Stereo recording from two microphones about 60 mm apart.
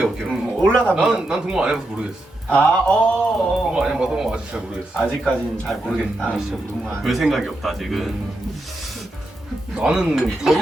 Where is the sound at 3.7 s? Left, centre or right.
Centre.